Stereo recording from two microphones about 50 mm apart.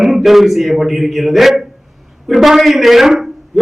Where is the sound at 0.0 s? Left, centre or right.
Centre.